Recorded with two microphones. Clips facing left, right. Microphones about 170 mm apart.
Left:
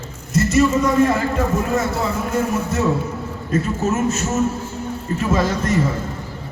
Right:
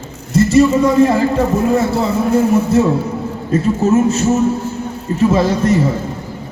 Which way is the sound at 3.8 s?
30° right (ahead or behind).